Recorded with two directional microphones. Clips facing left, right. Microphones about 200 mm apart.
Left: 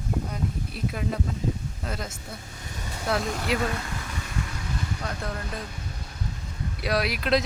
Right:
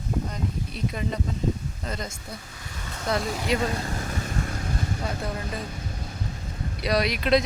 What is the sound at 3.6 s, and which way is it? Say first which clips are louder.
Vehicle: right 2 dB; 30° right (ahead or behind).